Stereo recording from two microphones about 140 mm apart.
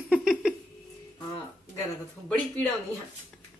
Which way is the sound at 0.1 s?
5° right (ahead or behind).